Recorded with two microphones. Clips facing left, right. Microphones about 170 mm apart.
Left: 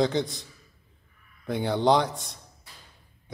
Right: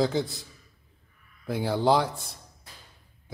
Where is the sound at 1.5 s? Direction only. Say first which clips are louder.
Left 1 dB; centre (ahead or behind).